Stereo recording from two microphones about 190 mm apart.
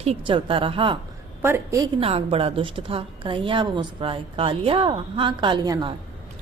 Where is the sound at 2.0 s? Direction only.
30° right (ahead or behind).